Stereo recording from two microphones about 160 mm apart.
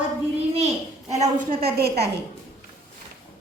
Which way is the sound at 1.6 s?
80° right.